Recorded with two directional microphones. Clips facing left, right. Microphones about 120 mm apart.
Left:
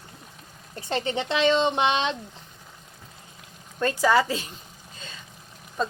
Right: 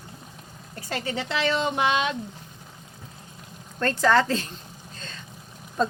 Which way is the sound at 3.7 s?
10° left (ahead or behind).